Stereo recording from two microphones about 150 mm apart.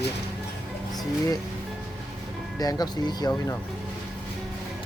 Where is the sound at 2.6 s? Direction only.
25° left (ahead or behind).